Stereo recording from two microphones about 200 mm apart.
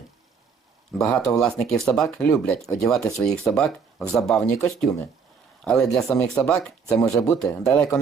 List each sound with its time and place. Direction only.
0.9 s speech: 5° left (ahead or behind)